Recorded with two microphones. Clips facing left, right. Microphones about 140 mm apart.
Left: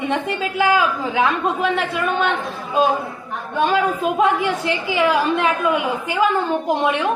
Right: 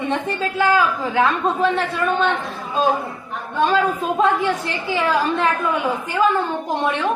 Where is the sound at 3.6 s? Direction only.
15° left (ahead or behind).